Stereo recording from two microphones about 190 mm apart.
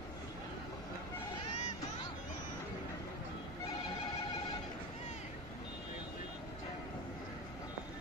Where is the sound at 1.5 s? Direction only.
40° left (ahead or behind).